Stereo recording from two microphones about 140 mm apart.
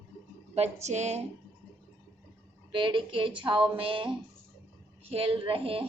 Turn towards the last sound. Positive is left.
turn(degrees=-40)  # may be behind; listen again after turning